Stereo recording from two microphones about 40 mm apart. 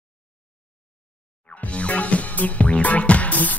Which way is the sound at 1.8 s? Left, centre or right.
Left.